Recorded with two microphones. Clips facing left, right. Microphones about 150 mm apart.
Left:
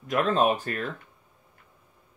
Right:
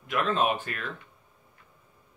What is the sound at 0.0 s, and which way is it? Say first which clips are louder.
Speech: left 3 dB; 40° left (ahead or behind).